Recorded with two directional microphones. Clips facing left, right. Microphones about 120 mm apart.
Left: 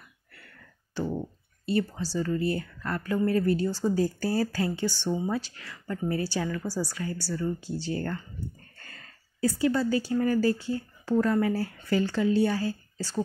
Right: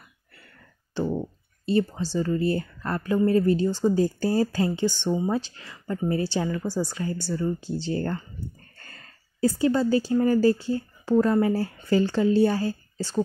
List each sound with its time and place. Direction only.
0.9 s speech: 25° right (ahead or behind)